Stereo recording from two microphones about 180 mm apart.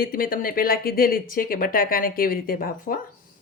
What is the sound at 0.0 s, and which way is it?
A woman's voice, 50° left (ahead or behind).